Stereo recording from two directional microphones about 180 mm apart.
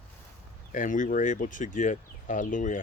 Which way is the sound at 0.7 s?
45° left (ahead or behind).